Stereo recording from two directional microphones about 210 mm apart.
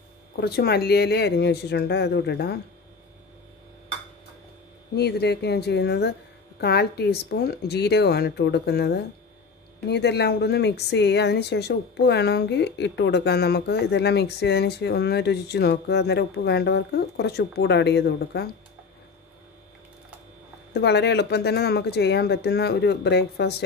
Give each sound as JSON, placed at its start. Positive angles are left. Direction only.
{"t": 0.4, "sound": "speech", "side_deg": 50}
{"t": 4.9, "sound": "speech", "side_deg": 50}
{"t": 20.7, "sound": "speech", "side_deg": 50}